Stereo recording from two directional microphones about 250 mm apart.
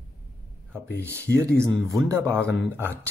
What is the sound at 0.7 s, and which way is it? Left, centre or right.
Speech, centre.